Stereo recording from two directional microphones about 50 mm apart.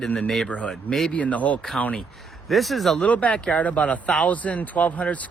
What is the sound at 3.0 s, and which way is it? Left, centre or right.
Speech, left.